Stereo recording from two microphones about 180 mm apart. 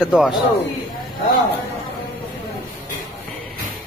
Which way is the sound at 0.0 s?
Centre (ahead or behind).